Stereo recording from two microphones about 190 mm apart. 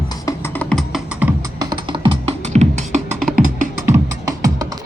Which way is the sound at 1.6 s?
25° right (ahead or behind).